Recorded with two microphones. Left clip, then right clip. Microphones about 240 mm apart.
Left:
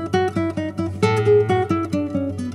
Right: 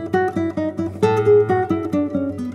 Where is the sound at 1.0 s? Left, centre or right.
Left.